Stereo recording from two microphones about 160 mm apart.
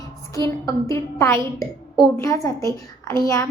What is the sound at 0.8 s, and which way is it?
A woman's voice, 15° left (ahead or behind).